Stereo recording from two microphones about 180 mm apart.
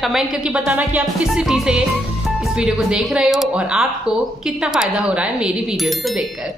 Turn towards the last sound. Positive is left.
turn(degrees=0)  # may be behind; listen again after turning